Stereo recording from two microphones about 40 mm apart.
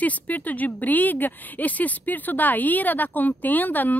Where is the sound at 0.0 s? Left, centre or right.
Left.